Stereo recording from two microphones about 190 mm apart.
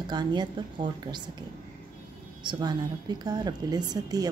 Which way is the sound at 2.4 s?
25° right (ahead or behind).